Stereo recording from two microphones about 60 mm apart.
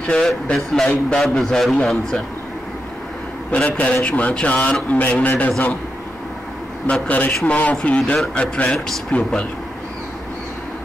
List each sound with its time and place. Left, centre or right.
0.0 s speech: centre
3.5 s speech: left
7.1 s speech: left